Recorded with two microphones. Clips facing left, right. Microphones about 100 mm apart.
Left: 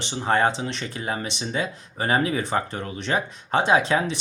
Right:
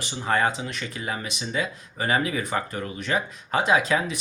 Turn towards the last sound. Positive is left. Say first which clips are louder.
# left 2 dB
turn(degrees=30)  # may be behind; listen again after turning